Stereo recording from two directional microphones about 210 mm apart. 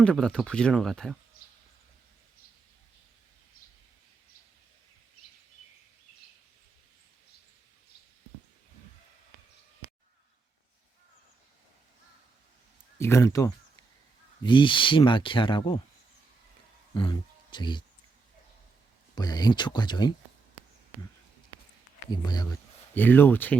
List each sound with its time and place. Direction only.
0.0 s speech: 5° left (ahead or behind)
13.0 s speech: 15° left (ahead or behind)
16.9 s speech: 20° left (ahead or behind)
19.1 s speech: 20° left (ahead or behind)
22.1 s speech: 20° left (ahead or behind)